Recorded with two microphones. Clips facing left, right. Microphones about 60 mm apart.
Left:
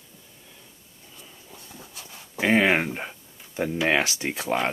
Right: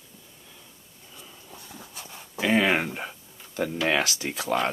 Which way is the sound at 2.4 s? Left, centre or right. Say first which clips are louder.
Left 2 dB; left.